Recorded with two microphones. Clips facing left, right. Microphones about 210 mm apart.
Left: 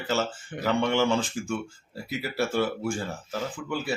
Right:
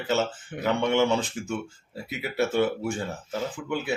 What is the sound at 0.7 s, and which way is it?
Speech, 20° right (ahead or behind).